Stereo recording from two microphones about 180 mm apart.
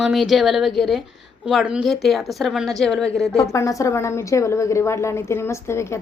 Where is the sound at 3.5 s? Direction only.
15° left (ahead or behind).